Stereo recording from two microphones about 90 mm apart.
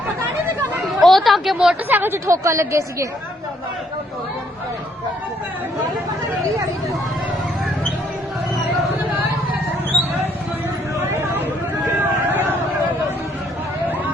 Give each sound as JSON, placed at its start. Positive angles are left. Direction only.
{"t": 0.9, "sound": "a sound", "side_deg": 0}
{"t": 1.9, "sound": "a woman's voice", "side_deg": -25}
{"t": 11.9, "sound": "vehicle", "side_deg": -20}